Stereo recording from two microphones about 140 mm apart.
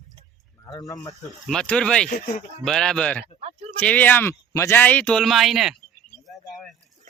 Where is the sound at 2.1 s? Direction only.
65° left (ahead or behind).